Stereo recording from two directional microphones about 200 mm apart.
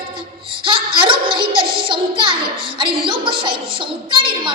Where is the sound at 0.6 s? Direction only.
25° right (ahead or behind).